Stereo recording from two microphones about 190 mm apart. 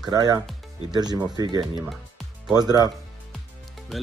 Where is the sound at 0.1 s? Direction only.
20° right (ahead or behind).